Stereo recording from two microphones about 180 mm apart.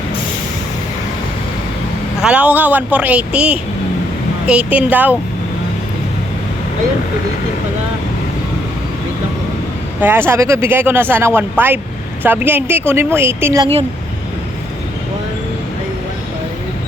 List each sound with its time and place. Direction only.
2.2 s speech: 5° right (ahead or behind)
10.0 s speech: 10° right (ahead or behind)